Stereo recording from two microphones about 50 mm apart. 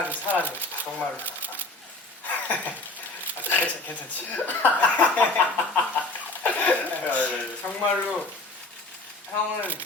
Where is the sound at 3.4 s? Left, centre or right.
Left.